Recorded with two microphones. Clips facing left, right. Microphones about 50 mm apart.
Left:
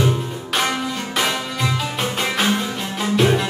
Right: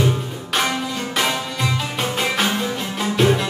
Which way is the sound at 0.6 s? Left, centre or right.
Centre.